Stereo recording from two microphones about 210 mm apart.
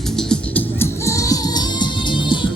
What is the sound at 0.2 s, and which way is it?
Music, 5° left (ahead or behind).